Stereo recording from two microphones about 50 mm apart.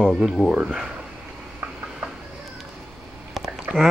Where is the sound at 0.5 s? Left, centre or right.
Right.